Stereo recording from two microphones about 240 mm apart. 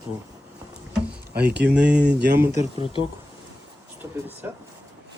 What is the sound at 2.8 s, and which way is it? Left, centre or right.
Speech, left.